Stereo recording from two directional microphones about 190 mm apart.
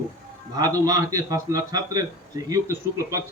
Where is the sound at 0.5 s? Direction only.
20° right (ahead or behind).